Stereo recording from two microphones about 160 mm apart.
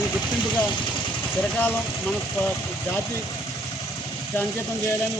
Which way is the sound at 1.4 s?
10° left (ahead or behind).